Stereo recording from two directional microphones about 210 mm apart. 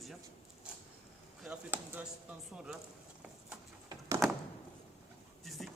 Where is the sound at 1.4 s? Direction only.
5° right (ahead or behind).